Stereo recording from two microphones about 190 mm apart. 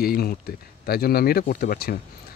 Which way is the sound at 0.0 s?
50° left (ahead or behind).